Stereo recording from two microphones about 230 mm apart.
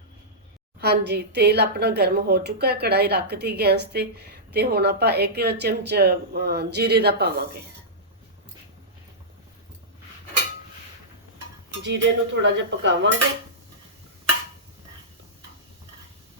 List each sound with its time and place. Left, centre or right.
0.8 s a woman's voice: right
11.8 s a woman's voice: right